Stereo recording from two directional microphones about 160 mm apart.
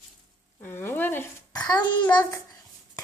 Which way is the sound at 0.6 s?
15° left (ahead or behind).